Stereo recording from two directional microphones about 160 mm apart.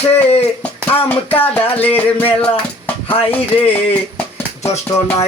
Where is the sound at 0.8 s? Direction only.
10° left (ahead or behind).